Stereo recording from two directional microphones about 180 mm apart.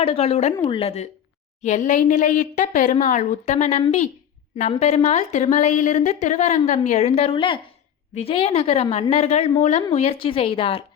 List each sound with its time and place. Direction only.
0.0 s a woman's voice: 30° left (ahead or behind)